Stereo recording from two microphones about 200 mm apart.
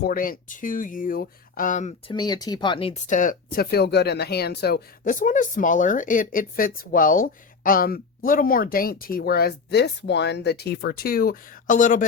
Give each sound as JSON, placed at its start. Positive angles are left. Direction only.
{"t": 0.0, "sound": "speech", "side_deg": 45}
{"t": 2.1, "sound": "speech", "side_deg": 20}